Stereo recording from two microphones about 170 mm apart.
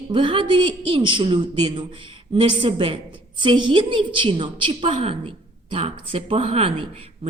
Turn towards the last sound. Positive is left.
turn(degrees=-35)  # may be behind; listen again after turning